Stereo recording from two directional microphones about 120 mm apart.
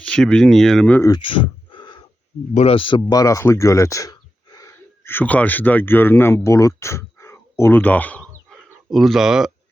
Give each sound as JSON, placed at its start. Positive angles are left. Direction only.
{"t": 0.0, "sound": "speech", "side_deg": 10}
{"t": 1.2, "sound": "a sound", "side_deg": 45}
{"t": 2.6, "sound": "speech", "side_deg": 50}
{"t": 3.1, "sound": "speech", "side_deg": 30}
{"t": 5.0, "sound": "speech", "side_deg": 15}
{"t": 8.9, "sound": "speech", "side_deg": 0}